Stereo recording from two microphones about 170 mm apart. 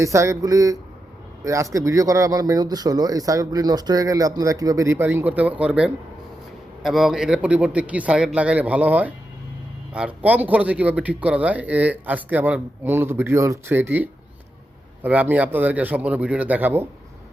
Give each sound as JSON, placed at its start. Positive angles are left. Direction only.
{"t": 0.0, "sound": "speech", "side_deg": -20}